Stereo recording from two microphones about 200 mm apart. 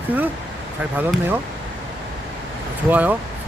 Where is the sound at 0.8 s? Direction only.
10° right (ahead or behind).